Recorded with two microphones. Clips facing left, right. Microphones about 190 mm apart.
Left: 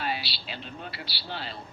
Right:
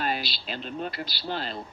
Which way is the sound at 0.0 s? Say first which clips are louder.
Right 3 dB; 50° right (ahead or behind).